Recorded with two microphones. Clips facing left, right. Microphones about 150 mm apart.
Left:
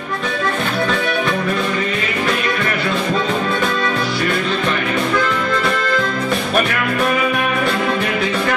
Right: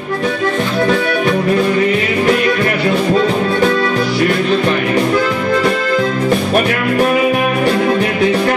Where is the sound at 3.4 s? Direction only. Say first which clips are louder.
Right 5 dB; 35° right (ahead or behind).